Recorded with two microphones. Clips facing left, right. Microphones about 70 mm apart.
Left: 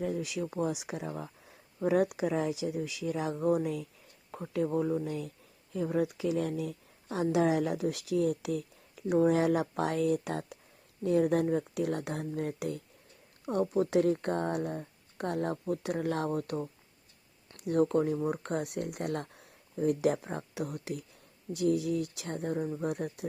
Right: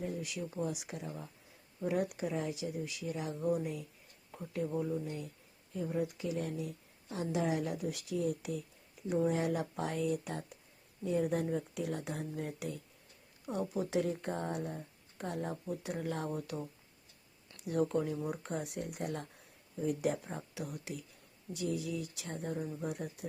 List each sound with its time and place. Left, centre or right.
0.0 s speech: left
5.7 s speech: left
11.0 s speech: left
18.3 s speech: left